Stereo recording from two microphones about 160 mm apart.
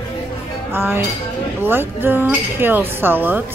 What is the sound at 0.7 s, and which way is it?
Chink, 15° right (ahead or behind).